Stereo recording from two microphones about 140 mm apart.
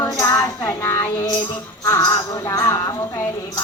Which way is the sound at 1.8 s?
25° left (ahead or behind).